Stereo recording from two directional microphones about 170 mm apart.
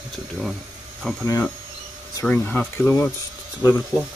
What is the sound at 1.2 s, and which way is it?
Speech, 15° left (ahead or behind).